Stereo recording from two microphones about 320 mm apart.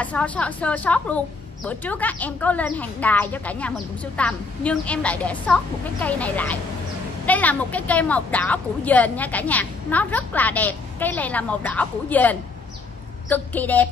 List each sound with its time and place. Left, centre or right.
0.0 s a woman's voice: centre